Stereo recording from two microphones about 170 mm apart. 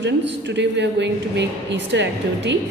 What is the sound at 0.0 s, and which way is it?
A woman's voice, 90° right.